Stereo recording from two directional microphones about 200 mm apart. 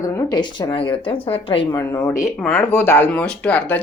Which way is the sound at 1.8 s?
15° left (ahead or behind).